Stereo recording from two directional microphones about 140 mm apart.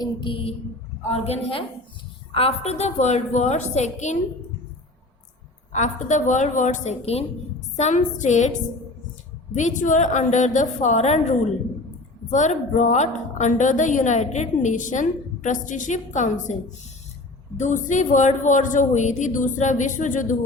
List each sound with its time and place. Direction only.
0.0 s mantra: 35° left (ahead or behind)
1.1 s a woman's voice: 45° left (ahead or behind)
5.7 s a woman's voice: 60° left (ahead or behind)
9.6 s a woman's voice: 65° left (ahead or behind)
17.6 s a woman's voice: 60° left (ahead or behind)